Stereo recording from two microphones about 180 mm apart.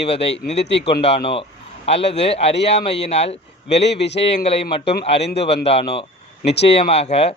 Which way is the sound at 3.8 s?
70° left (ahead or behind).